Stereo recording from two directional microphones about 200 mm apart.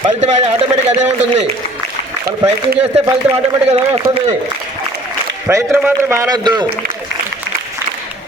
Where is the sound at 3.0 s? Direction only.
20° right (ahead or behind).